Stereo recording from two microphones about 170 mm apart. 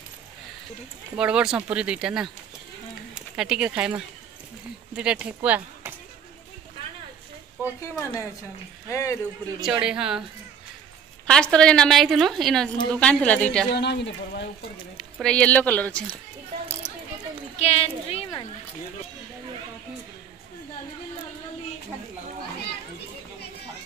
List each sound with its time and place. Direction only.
1.1 s a woman's voice: 5° right (ahead or behind)
3.3 s speech: 5° right (ahead or behind)
8.0 s speech: 15° left (ahead or behind)
9.6 s a woman's voice: 5° right (ahead or behind)
11.2 s a woman's voice: 5° left (ahead or behind)
13.7 s speech: 90° left
15.2 s speech: 5° left (ahead or behind)
17.6 s speech: 35° left (ahead or behind)